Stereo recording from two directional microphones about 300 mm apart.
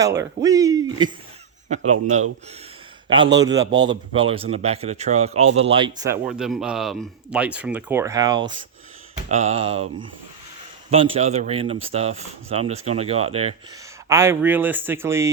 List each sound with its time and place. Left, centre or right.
0.0 s speech: centre
1.9 s speech: right
3.3 s speech: centre
6.2 s speech: centre
10.9 s speech: centre
14.1 s speech: centre